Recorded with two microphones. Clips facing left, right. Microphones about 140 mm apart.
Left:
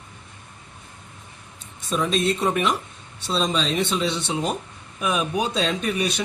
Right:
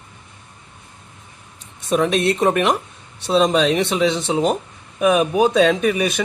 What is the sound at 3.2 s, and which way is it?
Speech, 75° right (ahead or behind).